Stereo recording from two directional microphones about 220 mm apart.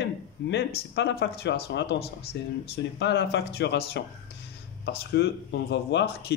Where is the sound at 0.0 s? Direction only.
50° left (ahead or behind).